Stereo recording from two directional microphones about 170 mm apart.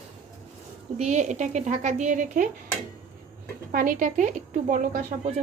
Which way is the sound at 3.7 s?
50° right (ahead or behind).